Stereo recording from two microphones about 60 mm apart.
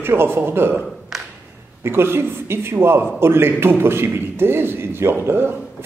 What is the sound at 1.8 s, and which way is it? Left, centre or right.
A man's voice, right.